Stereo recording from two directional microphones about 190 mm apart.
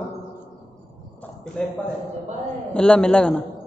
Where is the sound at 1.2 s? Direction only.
5° left (ahead or behind).